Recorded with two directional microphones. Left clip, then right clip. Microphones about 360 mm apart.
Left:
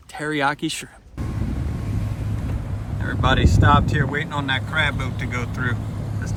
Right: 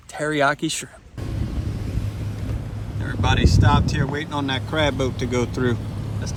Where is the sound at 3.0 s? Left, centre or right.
Centre.